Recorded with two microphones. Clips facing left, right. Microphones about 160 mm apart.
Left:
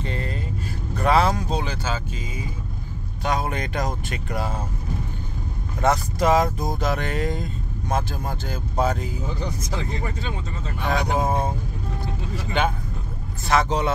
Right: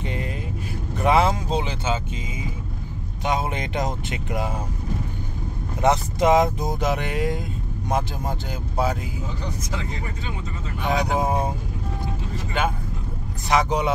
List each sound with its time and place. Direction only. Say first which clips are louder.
0.0 s vehicle: even; 15° right (ahead or behind)
3.3 s speech: even; 20° right (ahead or behind)
5.8 s speech: right 1 dB; 20° right (ahead or behind)
10.9 s speech: right 1 dB; 10° right (ahead or behind)
13.5 s speech: even; 15° right (ahead or behind)